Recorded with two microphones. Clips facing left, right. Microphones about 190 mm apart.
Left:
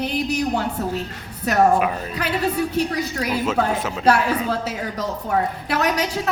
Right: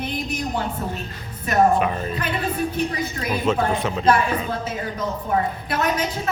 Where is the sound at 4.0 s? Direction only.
75° left (ahead or behind).